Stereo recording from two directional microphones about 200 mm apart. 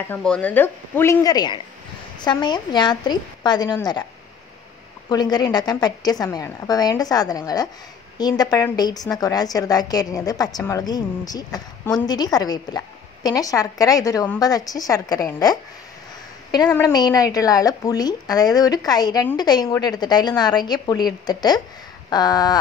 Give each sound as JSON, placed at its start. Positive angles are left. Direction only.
{"t": 0.0, "sound": "a woman's voice", "side_deg": 5}
{"t": 5.1, "sound": "a woman's voice", "side_deg": 20}